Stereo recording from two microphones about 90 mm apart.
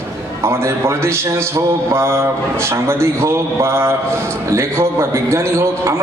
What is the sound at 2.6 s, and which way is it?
A man's voice, 30° right (ahead or behind).